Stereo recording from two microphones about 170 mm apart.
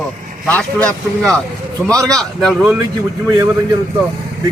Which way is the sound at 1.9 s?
20° right (ahead or behind).